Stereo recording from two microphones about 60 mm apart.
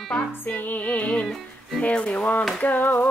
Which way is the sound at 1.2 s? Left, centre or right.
Centre.